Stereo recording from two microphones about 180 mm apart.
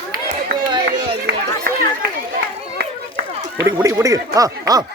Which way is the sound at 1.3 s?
65° right (ahead or behind).